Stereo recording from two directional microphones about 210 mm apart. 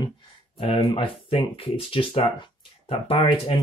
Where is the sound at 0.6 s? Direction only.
25° left (ahead or behind).